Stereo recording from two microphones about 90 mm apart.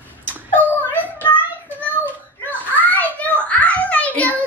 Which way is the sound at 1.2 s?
20° left (ahead or behind).